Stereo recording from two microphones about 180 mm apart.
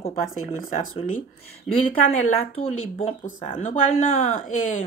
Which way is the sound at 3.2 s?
45° left (ahead or behind).